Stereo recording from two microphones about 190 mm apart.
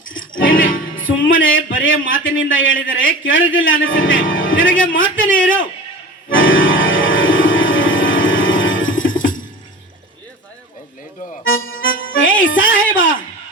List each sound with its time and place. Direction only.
0.1 s music: 90° left
0.9 s a man's voice: 90° left
6.3 s organ: 90° left
11.4 s music: 90° left
12.8 s music: 45° left (ahead or behind)